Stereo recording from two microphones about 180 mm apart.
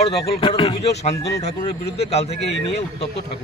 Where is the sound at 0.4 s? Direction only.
30° left (ahead or behind).